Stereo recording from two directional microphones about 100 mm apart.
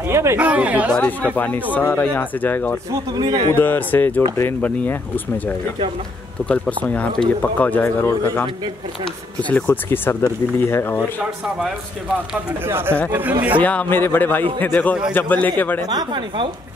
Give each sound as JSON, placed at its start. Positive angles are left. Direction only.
{"t": 0.1, "sound": "speech", "side_deg": -30}
{"t": 0.4, "sound": "speech", "side_deg": -15}
{"t": 0.9, "sound": "speech", "side_deg": 15}
{"t": 3.1, "sound": "speech", "side_deg": -45}
{"t": 3.5, "sound": "speech", "side_deg": 20}
{"t": 6.4, "sound": "speech", "side_deg": 15}
{"t": 11.1, "sound": "speech", "side_deg": -5}
{"t": 12.6, "sound": "speech", "side_deg": -25}
{"t": 13.6, "sound": "speech", "side_deg": 15}
{"t": 15.9, "sound": "speech", "side_deg": -45}